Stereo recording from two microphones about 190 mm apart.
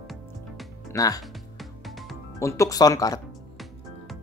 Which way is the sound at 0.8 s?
20° left (ahead or behind).